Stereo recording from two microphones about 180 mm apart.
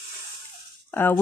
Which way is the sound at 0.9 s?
10° left (ahead or behind).